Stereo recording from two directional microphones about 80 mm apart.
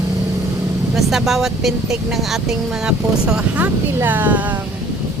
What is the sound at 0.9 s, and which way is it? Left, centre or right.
Speech, centre.